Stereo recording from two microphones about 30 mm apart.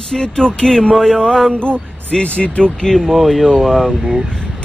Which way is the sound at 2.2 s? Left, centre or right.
Left.